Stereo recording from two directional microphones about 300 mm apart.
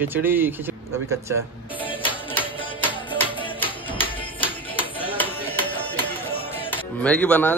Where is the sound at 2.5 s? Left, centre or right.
Centre.